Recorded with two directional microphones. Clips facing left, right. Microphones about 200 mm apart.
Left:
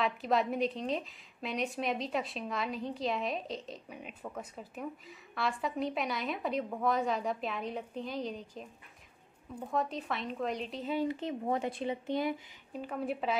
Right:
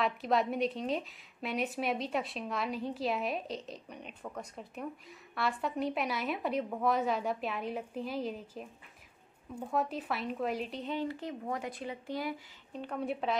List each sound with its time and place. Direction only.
0.0 s a woman's voice: centre (ahead or behind)
9.7 s a woman's voice: 5° right (ahead or behind)
11.1 s speech: 20° left (ahead or behind)
12.7 s a woman's voice: 5° left (ahead or behind)